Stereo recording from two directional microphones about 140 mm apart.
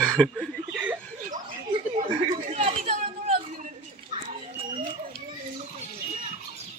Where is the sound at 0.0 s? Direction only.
5° left (ahead or behind).